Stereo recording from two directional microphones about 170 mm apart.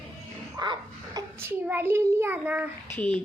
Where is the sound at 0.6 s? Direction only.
25° right (ahead or behind).